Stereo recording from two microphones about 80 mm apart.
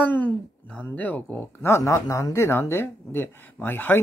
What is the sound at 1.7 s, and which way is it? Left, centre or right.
Speech, left.